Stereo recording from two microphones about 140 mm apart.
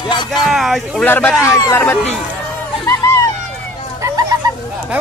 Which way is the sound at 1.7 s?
15° left (ahead or behind).